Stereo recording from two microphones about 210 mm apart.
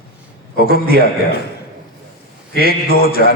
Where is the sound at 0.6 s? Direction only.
45° left (ahead or behind).